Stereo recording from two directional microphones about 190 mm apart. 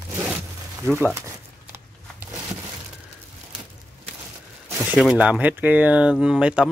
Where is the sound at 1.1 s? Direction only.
15° right (ahead or behind).